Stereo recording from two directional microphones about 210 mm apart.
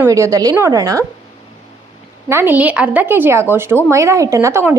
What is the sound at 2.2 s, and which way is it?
A woman's voice, 10° right (ahead or behind).